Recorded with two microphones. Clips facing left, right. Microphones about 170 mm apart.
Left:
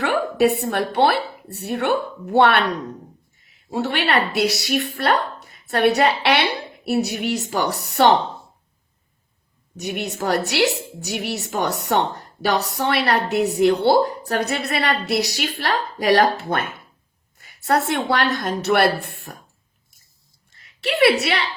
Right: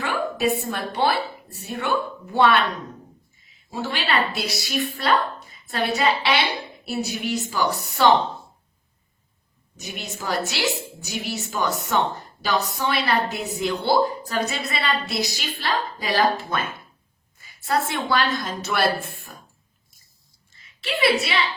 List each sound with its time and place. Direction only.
0.0 s a woman's voice: 65° left (ahead or behind)
3.7 s a woman's voice: 65° left (ahead or behind)
9.7 s a woman's voice: 65° left (ahead or behind)
20.6 s a woman's voice: 65° left (ahead or behind)